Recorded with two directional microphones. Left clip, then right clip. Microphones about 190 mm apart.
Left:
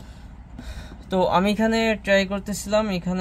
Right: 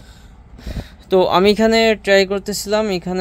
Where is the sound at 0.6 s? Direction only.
40° right (ahead or behind).